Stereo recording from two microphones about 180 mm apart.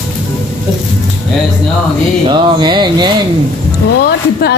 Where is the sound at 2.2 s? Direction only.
25° right (ahead or behind).